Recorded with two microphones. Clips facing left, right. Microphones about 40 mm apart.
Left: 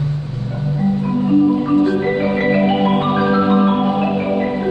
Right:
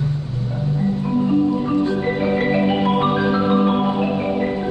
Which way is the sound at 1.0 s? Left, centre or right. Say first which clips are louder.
Left 4 dB; centre.